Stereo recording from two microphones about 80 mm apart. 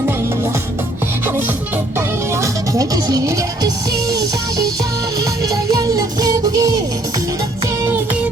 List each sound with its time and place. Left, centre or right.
2.0 s music: right